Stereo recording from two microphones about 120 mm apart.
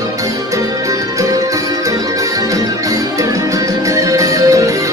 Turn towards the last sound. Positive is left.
turn(degrees=-30)  # may be behind; listen again after turning